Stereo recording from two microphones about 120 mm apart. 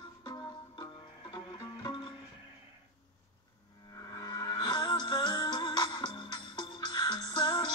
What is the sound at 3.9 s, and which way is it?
Music, 30° left (ahead or behind).